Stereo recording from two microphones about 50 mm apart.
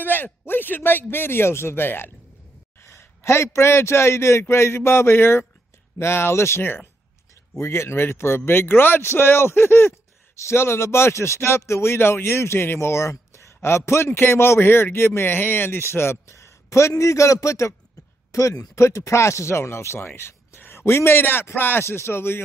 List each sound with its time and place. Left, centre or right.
0.0 s a man's voice: left
2.8 s a man's voice: left
10.3 s speech: left